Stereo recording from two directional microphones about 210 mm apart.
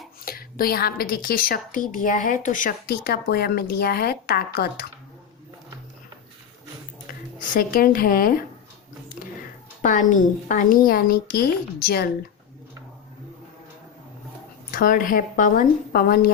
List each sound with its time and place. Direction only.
0.3 s a woman's voice: 45° left (ahead or behind)
7.1 s speech: 40° left (ahead or behind)
9.8 s a woman's voice: 35° left (ahead or behind)
14.7 s speech: 40° left (ahead or behind)